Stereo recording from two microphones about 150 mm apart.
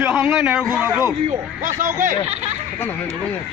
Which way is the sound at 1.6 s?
60° right (ahead or behind).